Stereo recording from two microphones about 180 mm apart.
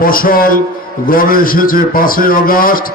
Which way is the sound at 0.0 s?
55° left (ahead or behind).